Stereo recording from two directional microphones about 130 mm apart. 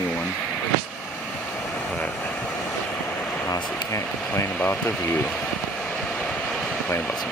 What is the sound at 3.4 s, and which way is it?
Speech, 25° left (ahead or behind).